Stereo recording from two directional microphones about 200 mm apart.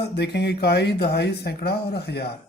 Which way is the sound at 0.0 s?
55° left (ahead or behind).